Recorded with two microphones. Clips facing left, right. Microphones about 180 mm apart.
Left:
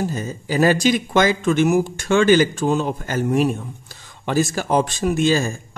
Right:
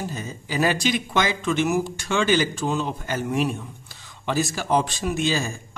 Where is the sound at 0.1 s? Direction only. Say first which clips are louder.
Left 6 dB; 40° left (ahead or behind).